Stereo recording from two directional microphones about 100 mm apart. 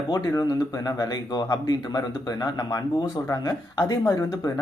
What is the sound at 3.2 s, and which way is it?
Speech, 25° left (ahead or behind).